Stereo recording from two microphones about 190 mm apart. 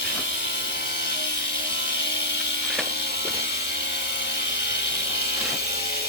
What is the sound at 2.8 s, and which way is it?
Ratchet, 60° left (ahead or behind).